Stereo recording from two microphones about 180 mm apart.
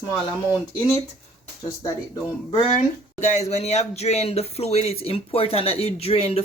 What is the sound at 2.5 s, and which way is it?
Speech, 40° left (ahead or behind).